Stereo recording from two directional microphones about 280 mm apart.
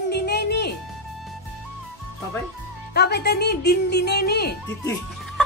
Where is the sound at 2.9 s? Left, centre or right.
Left.